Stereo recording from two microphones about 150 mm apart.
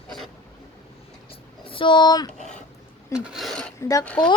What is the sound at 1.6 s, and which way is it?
Speech, 35° left (ahead or behind).